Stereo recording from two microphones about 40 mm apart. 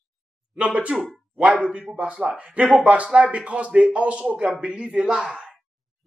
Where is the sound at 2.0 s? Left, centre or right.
Right.